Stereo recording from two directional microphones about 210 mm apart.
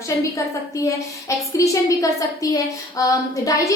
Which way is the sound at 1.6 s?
15° left (ahead or behind).